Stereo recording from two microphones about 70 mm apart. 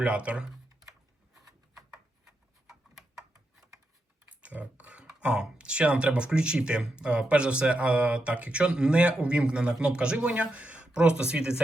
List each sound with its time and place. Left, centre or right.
0.0 s speech: centre
4.3 s speech: centre